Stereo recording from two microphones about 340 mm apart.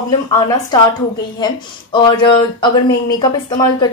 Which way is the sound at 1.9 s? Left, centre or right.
Centre.